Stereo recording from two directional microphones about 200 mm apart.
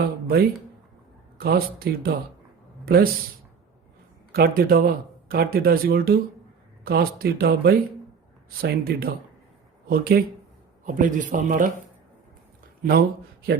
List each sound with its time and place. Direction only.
1.4 s a man's voice: 50° right (ahead or behind)
4.3 s speech: 50° right (ahead or behind)
12.8 s a man's voice: 50° right (ahead or behind)